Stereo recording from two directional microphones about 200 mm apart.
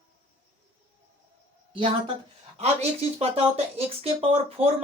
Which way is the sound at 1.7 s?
25° right (ahead or behind).